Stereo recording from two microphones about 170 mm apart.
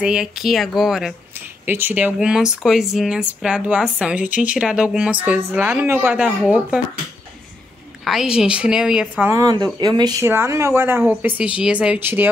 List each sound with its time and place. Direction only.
0.0 s speech: 5° right (ahead or behind)
8.0 s speech: centre (ahead or behind)
9.2 s speech: 20° right (ahead or behind)